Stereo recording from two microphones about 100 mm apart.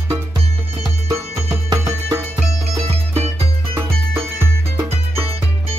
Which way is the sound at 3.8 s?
25° right (ahead or behind).